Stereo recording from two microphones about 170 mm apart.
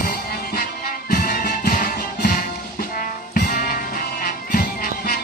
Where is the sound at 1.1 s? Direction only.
55° left (ahead or behind).